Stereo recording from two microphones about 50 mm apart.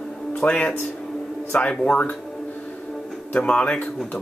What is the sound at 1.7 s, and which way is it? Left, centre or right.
Speech, centre.